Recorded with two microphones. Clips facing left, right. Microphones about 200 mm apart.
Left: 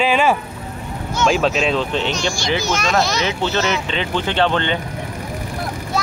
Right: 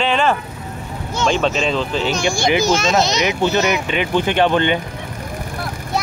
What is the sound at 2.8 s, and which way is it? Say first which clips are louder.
Speech: right 2 dB; 20° right (ahead or behind).